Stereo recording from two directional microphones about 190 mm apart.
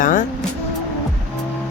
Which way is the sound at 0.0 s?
45° left (ahead or behind).